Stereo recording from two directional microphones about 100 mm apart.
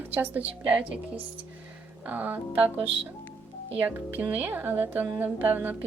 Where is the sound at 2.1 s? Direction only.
15° right (ahead or behind).